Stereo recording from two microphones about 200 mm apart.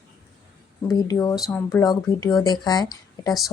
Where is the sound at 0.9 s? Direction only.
20° left (ahead or behind).